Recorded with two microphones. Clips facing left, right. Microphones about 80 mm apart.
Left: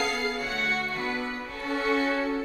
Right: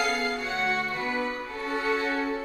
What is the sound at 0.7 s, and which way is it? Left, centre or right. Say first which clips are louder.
Music: right 1 dB; centre.